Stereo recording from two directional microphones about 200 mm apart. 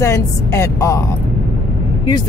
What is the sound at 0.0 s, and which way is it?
Speech, 15° left (ahead or behind).